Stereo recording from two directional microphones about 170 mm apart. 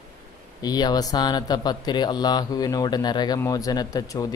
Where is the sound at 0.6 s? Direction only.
25° left (ahead or behind).